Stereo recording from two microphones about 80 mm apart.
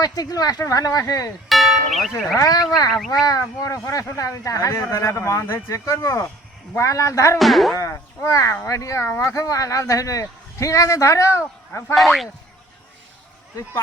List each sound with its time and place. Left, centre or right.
0.0 s speech: left
1.5 s music: centre
2.7 s speech: left
7.3 s speech: centre
7.8 s speech: left
11.9 s speech: centre